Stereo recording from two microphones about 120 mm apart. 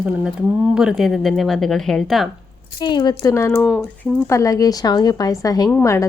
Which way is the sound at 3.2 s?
25° left (ahead or behind).